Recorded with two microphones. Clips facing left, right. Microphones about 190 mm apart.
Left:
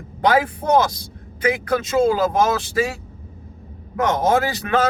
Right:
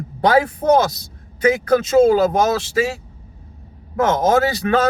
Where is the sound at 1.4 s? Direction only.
35° right (ahead or behind).